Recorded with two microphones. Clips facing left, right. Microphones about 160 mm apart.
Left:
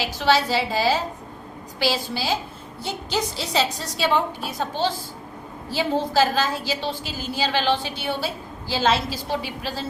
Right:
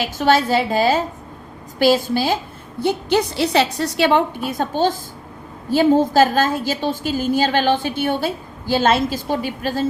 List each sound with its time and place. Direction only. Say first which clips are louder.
0.0 s a woman's voice: right 4 dB; 50° right (ahead or behind)